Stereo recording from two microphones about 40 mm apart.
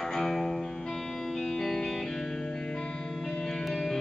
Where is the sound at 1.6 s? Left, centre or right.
Centre.